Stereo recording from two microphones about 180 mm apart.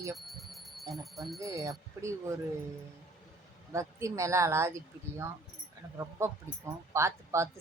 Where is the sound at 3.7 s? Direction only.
15° right (ahead or behind).